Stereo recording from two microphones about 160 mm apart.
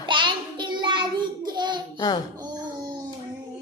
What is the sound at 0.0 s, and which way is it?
Child singing, 30° right (ahead or behind).